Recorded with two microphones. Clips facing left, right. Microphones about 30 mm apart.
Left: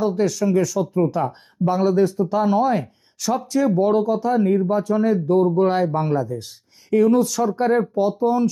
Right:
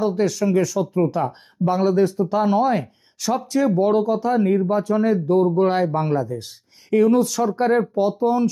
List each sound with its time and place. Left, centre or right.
0.0 s speech: centre
0.3 s speech: right
3.2 s speech: right
3.8 s speech: right